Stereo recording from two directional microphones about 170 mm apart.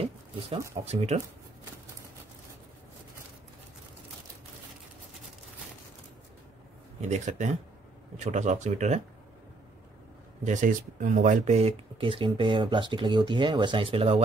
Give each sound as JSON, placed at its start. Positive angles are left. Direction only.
{"t": 0.8, "sound": "speech", "side_deg": -40}
{"t": 7.0, "sound": "speech", "side_deg": -45}
{"t": 10.4, "sound": "speech", "side_deg": -45}